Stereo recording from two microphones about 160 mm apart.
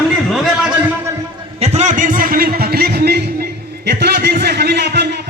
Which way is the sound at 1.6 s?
40° right (ahead or behind).